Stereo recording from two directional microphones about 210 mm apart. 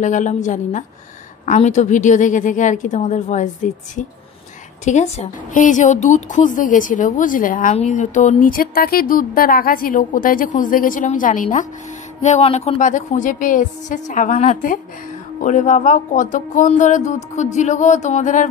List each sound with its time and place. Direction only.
0.0 s a woman's voice: 35° left (ahead or behind)